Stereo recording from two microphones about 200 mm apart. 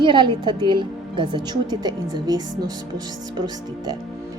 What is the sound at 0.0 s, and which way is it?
A woman's voice, 25° right (ahead or behind).